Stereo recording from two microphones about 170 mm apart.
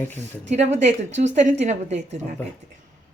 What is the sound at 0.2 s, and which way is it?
A woman's voice, 40° right (ahead or behind).